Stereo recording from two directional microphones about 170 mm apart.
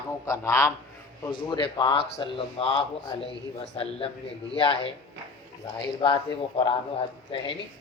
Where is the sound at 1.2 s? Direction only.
30° left (ahead or behind).